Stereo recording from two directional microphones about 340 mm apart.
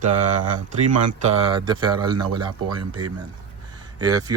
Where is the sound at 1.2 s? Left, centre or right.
Centre.